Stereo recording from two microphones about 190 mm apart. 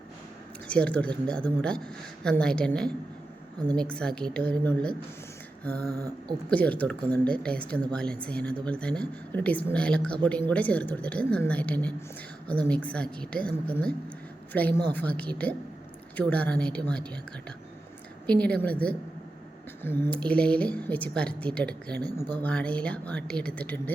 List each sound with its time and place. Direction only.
0.7 s a woman's voice: 5° left (ahead or behind)
5.8 s a sound: 20° right (ahead or behind)
6.5 s a woman's voice: 5° left (ahead or behind)
14.9 s speech: 5° left (ahead or behind)
18.3 s a woman's voice: 5° left (ahead or behind)